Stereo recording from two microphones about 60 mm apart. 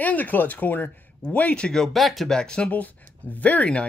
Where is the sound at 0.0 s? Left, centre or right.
Left.